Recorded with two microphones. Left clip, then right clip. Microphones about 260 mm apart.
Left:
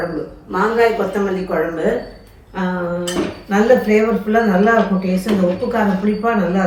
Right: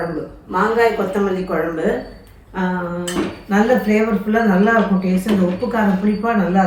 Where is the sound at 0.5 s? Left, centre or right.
Right.